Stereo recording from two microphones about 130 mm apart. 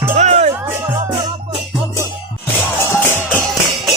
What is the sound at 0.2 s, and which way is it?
Music, 65° right (ahead or behind).